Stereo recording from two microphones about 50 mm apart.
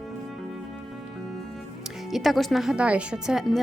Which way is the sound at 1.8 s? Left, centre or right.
Centre.